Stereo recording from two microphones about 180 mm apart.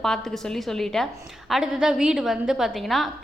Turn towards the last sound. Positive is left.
turn(degrees=0)  # may be behind; listen again after turning